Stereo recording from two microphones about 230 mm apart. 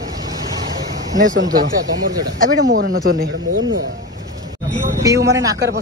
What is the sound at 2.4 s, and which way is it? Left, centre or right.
Speech, right.